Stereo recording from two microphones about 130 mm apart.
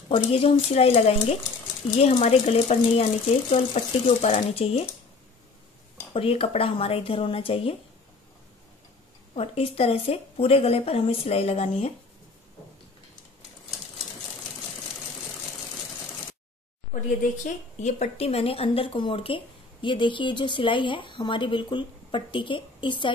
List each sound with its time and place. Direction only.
0.1 s a woman's voice: 45° left (ahead or behind)
2.0 s speech: 55° left (ahead or behind)
6.1 s a woman's voice: 45° left (ahead or behind)
9.3 s a woman's voice: 50° left (ahead or behind)
16.9 s speech: 80° left; by 23.1 s 40° left (ahead or behind)